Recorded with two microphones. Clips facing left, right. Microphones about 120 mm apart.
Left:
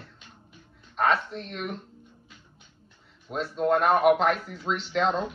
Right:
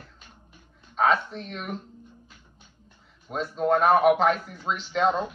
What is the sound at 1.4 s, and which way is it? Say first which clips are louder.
Speech: left 1 dB; centre (ahead or behind).